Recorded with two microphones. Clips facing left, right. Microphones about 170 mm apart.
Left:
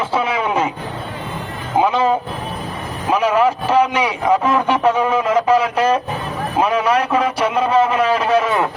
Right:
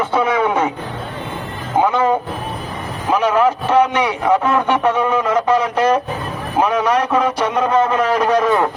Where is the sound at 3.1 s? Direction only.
10° left (ahead or behind).